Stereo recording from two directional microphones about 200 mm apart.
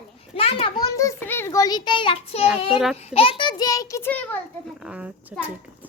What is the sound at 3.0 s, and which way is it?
A child's voice, 30° left (ahead or behind).